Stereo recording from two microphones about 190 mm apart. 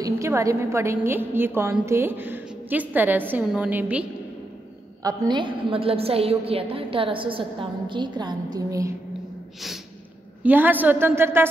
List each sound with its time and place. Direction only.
0.0 s a woman's voice: 15° right (ahead or behind)
5.0 s a woman's voice: 20° right (ahead or behind)
10.4 s a woman's voice: 10° right (ahead or behind)